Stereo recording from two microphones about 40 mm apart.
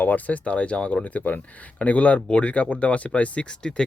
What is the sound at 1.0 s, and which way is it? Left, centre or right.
Speech, left.